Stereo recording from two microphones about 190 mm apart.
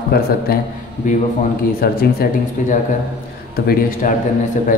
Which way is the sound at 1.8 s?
50° left (ahead or behind).